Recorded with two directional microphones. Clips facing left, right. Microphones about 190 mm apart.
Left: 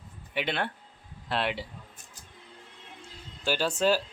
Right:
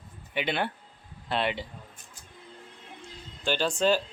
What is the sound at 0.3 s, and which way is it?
Speech, centre (ahead or behind).